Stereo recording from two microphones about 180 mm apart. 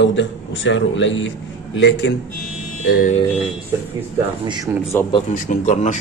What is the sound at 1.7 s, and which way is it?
Speech, 80° left.